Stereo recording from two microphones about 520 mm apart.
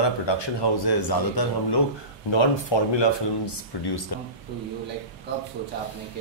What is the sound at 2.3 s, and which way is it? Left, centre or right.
A man's voice, left.